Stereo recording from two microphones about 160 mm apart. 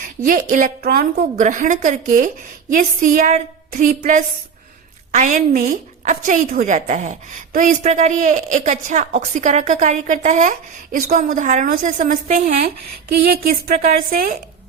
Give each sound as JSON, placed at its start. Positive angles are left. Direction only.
{"t": 0.0, "sound": "a woman's voice", "side_deg": -60}
{"t": 13.1, "sound": "speech", "side_deg": -80}